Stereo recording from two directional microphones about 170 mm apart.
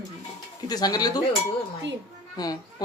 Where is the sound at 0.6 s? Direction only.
25° left (ahead or behind).